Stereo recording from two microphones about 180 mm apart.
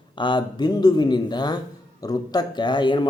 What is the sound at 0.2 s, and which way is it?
Speech, 25° left (ahead or behind).